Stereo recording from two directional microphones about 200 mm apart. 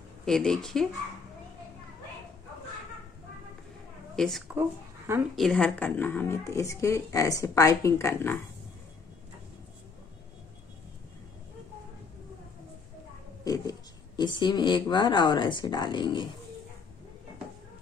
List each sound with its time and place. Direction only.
0.2 s speech: centre (ahead or behind)
4.2 s speech: centre (ahead or behind)
4.6 s speech: 10° right (ahead or behind)
5.3 s speech: centre (ahead or behind)
13.4 s speech: 15° left (ahead or behind)